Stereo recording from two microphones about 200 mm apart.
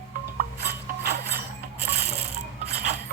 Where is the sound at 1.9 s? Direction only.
55° right (ahead or behind).